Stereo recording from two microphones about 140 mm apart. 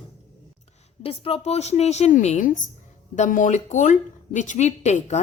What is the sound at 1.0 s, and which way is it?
Speech, 40° left (ahead or behind).